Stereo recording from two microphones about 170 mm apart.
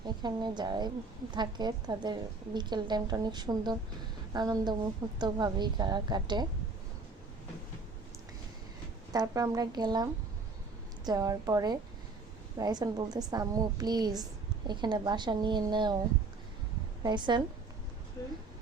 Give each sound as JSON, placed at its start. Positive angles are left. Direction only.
{"t": 0.0, "sound": "a woman's voice", "side_deg": -25}
{"t": 9.1, "sound": "a woman's voice", "side_deg": -20}
{"t": 17.0, "sound": "a woman's voice", "side_deg": -25}
{"t": 18.2, "sound": "speech", "side_deg": 15}